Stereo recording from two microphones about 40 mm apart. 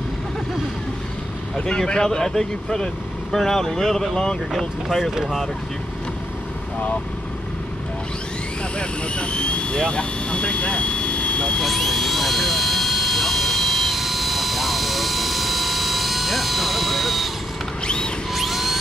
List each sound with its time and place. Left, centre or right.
1.7 s speech: centre
8.7 s vehicle: left
11.6 s vehicle: centre
17.8 s music: left
18.3 s music: centre